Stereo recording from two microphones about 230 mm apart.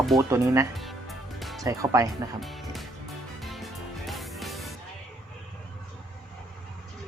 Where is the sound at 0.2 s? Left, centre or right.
Centre.